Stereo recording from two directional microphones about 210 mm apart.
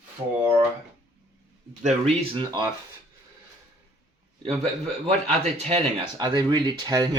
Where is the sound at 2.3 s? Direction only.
20° right (ahead or behind).